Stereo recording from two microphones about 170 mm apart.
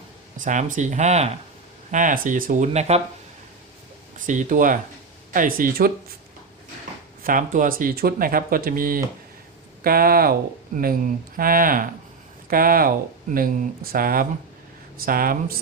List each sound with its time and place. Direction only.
0.3 s speech: 45° right (ahead or behind)
4.3 s speech: 50° right (ahead or behind)
7.2 s speech: 55° right (ahead or behind)